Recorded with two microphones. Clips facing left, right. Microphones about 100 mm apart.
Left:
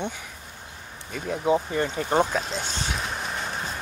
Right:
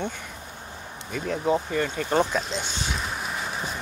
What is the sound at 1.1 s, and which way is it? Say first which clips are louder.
Speech: left 1 dB; 10° left (ahead or behind).